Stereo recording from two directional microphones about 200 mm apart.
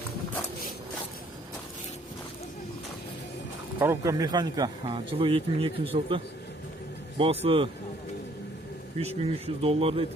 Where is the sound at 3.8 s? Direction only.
15° right (ahead or behind).